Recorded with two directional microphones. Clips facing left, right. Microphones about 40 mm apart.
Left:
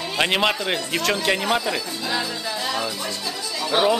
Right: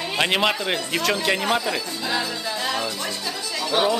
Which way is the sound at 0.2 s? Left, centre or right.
Centre.